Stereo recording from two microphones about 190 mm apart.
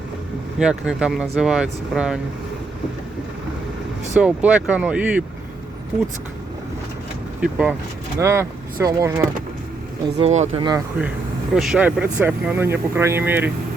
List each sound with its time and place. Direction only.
0.6 s speech: 5° right (ahead or behind)
4.2 s speech: 5° right (ahead or behind)
7.4 s speech: 5° right (ahead or behind)
10.2 s speech: 35° right (ahead or behind)
10.6 s speech: 20° right (ahead or behind)
11.5 s speech: 5° right (ahead or behind)